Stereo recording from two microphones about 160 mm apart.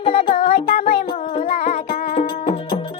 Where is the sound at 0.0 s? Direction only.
35° left (ahead or behind).